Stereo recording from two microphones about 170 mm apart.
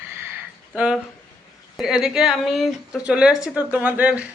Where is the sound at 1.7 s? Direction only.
5° right (ahead or behind).